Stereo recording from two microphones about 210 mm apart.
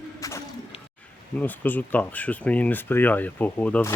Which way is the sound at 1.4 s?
10° left (ahead or behind).